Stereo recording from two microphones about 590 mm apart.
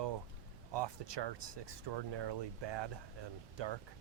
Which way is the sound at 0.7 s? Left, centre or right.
Right.